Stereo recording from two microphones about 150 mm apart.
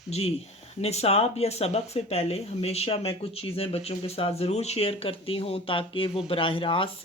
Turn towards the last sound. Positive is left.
turn(degrees=35)  # may be behind; listen again after turning